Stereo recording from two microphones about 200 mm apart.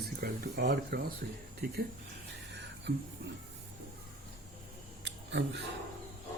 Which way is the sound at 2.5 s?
60° right (ahead or behind).